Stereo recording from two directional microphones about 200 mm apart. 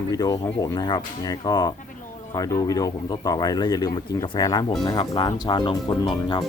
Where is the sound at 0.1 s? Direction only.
15° left (ahead or behind).